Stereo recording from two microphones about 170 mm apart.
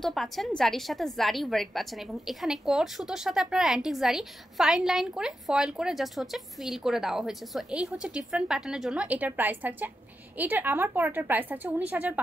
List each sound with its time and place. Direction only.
0.0 s a woman's voice: centre (ahead or behind)